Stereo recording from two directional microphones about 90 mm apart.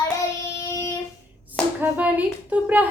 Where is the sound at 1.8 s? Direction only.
20° right (ahead or behind).